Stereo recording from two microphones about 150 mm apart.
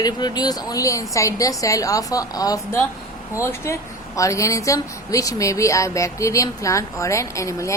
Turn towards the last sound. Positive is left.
turn(degrees=20)  # may be behind; listen again after turning